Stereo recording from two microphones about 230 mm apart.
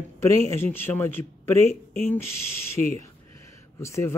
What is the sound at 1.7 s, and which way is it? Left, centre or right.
Speech, left.